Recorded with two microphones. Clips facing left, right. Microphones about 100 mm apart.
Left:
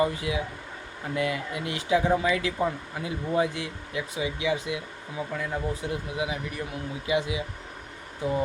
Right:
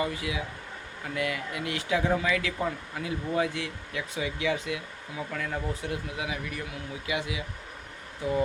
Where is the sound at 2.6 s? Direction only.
15° left (ahead or behind).